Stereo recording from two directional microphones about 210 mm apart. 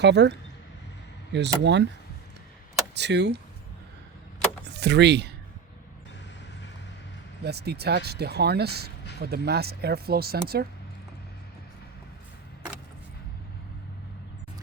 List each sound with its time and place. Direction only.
0.0 s speech: 55° right (ahead or behind)
2.9 s speech: 55° right (ahead or behind)
4.6 s speech: 55° right (ahead or behind)
7.4 s speech: 50° right (ahead or behind)